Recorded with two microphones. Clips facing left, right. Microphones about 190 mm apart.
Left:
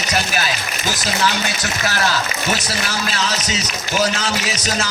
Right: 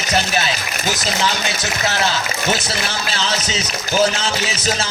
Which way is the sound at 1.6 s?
20° right (ahead or behind).